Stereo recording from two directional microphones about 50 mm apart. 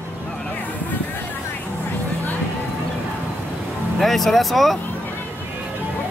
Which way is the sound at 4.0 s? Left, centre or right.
Centre.